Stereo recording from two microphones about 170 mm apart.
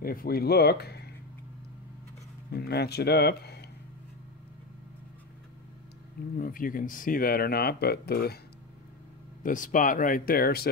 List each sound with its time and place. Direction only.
0.0 s speech: 60° left (ahead or behind)
2.5 s speech: 70° left (ahead or behind)
6.3 s speech: 55° left (ahead or behind)
9.4 s speech: 50° left (ahead or behind)